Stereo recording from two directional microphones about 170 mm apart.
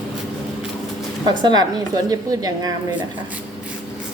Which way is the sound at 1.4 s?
25° right (ahead or behind).